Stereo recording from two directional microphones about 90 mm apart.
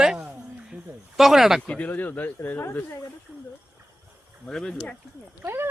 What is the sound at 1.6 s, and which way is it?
Speech, 15° left (ahead or behind).